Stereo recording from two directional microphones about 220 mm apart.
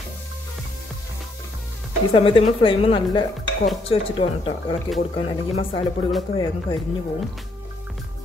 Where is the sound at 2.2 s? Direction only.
25° left (ahead or behind).